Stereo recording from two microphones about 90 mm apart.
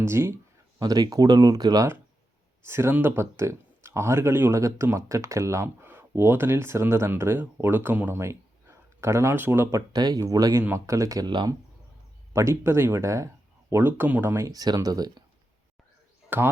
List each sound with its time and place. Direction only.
0.0 s speech: 30° right (ahead or behind)
0.8 s speech: 45° right (ahead or behind)
2.6 s speech: 30° right (ahead or behind)
9.9 s speech: 45° right (ahead or behind)
12.3 s speech: 30° right (ahead or behind)
14.5 s speech: 45° right (ahead or behind)
16.3 s speech: 20° right (ahead or behind)